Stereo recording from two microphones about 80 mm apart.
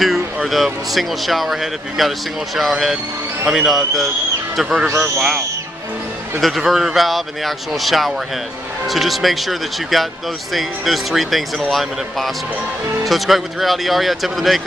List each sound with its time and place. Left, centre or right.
0.0 s speech: centre
4.8 s a man's voice: right
6.4 s speech: centre